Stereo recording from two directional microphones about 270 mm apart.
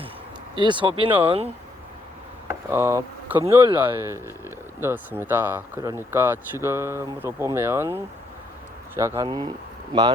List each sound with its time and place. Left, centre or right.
0.5 s speech: centre
2.5 s speech: centre